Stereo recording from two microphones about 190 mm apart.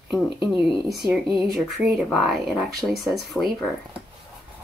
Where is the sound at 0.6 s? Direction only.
Centre (ahead or behind).